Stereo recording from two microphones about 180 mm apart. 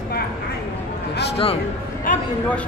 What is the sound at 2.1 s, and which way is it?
Speech, 45° left (ahead or behind).